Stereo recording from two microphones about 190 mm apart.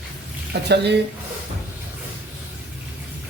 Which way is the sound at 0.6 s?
60° right (ahead or behind).